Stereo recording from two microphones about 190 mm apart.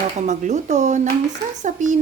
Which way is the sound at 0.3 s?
40° right (ahead or behind).